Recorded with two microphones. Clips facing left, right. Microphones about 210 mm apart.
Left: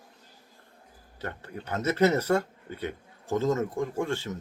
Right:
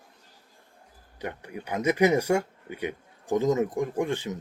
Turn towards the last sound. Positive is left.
turn(degrees=-15)  # may be behind; listen again after turning